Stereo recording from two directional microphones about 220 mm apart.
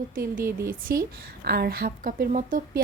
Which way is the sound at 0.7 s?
40° right (ahead or behind).